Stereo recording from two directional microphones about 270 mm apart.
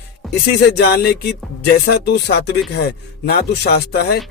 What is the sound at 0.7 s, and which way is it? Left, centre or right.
Speech, left.